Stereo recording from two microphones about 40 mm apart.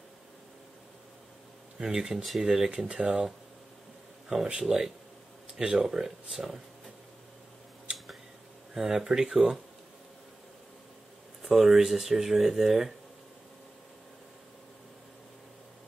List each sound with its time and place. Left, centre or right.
1.8 s speech: centre
2.9 s speech: right
4.5 s speech: centre
8.7 s speech: centre
11.4 s speech: centre